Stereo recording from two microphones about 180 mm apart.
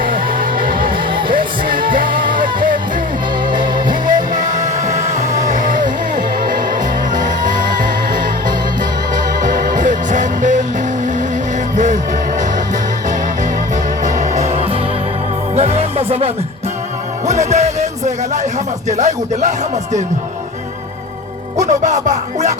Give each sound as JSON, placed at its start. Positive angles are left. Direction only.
{"t": 0.3, "sound": "music", "side_deg": -50}
{"t": 3.5, "sound": "music", "side_deg": -25}
{"t": 4.4, "sound": "music", "side_deg": -45}
{"t": 9.1, "sound": "music", "side_deg": -45}
{"t": 14.0, "sound": "music", "side_deg": -45}
{"t": 17.5, "sound": "music", "side_deg": -40}
{"t": 18.9, "sound": "speech", "side_deg": -40}
{"t": 21.7, "sound": "music", "side_deg": -40}